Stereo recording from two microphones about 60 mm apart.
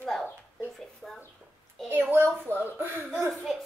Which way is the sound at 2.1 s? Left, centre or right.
Right.